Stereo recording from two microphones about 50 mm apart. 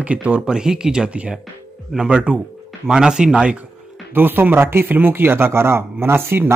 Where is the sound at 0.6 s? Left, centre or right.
Centre.